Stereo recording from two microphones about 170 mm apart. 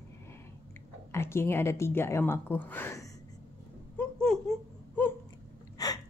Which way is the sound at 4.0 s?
5° left (ahead or behind).